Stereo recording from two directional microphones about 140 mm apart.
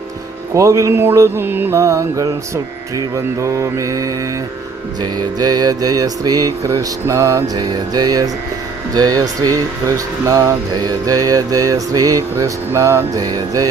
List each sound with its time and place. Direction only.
0.5 s mantra: 25° right (ahead or behind)
3.4 s mantra: 20° right (ahead or behind)
5.4 s mantra: 30° right (ahead or behind)